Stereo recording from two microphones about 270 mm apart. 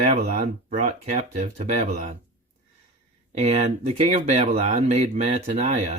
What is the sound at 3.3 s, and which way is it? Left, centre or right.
Speech, right.